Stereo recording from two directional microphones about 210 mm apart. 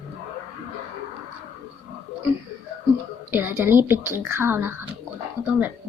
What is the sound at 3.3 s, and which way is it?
A woman's voice, 10° right (ahead or behind).